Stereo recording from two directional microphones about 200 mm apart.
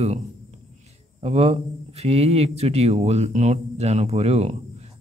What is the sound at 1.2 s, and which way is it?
Speech, 30° right (ahead or behind).